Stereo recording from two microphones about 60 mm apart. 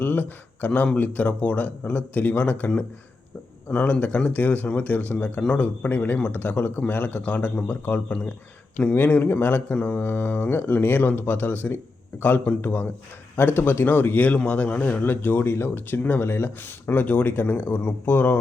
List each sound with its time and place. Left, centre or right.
0.0 s speech: left
4.3 s speech: left